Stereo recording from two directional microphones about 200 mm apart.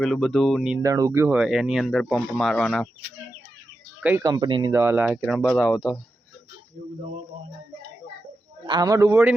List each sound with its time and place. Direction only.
0.0 s speech: centre (ahead or behind)
0.8 s speech: 15° right (ahead or behind); by 2.9 s 5° left (ahead or behind)
4.0 s speech: 15° right (ahead or behind)
4.7 s speech: 10° right (ahead or behind)
8.6 s a man's voice: 20° right (ahead or behind)